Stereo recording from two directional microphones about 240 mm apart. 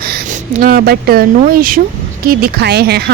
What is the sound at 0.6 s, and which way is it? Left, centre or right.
A woman's voice, right.